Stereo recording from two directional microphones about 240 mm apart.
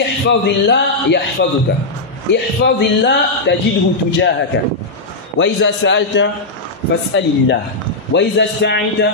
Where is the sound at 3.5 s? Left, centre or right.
Left.